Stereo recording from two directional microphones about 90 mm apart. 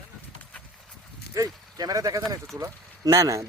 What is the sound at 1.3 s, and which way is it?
Speech, 45° right (ahead or behind).